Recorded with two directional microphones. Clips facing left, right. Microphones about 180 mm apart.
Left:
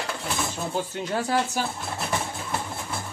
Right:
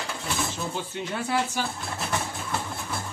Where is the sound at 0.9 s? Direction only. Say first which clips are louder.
Left 2 dB; 40° left (ahead or behind).